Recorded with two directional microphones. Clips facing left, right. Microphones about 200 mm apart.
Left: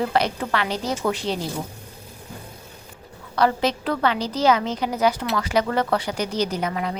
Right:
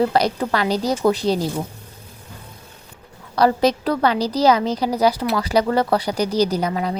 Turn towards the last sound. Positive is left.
turn(degrees=-35)  # may be behind; listen again after turning